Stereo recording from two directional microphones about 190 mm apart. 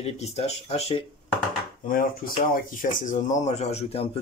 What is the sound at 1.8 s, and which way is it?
Speech, 45° left (ahead or behind).